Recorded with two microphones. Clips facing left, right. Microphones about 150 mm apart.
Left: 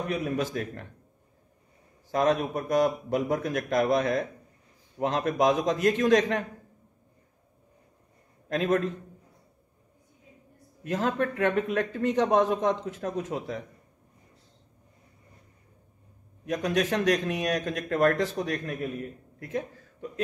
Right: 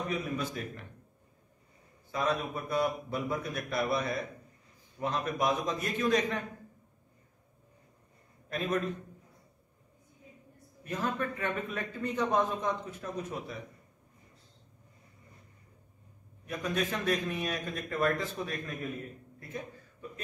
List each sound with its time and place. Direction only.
0.0 s a man's voice: 80° left
2.0 s a man's voice: 80° left
10.8 s speech: 90° left
16.4 s a man's voice: 90° left; by 18.8 s 75° left (ahead or behind)
19.4 s a sound: 90° left